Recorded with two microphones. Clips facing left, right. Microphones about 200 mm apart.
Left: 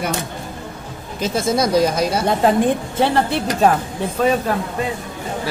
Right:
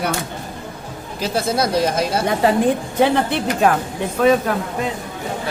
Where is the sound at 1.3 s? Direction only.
55° right (ahead or behind).